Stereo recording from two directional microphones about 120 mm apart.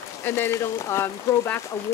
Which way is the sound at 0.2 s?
20° left (ahead or behind).